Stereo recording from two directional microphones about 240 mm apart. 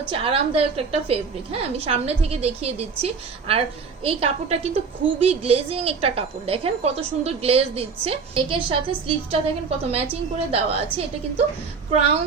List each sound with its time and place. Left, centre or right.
0.1 s a woman's voice: right
11.9 s a woman's voice: right